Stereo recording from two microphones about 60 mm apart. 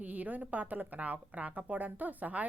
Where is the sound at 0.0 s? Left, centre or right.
Right.